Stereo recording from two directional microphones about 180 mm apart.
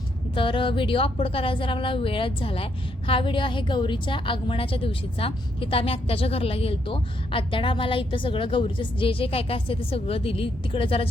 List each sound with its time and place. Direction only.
0.3 s a woman's voice: 30° left (ahead or behind)